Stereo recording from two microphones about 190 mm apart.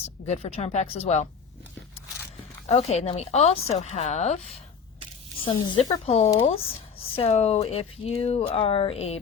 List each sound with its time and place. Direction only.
0.3 s speech: 35° left (ahead or behind)
2.6 s speech: 35° left (ahead or behind)
5.5 s speech: 25° left (ahead or behind)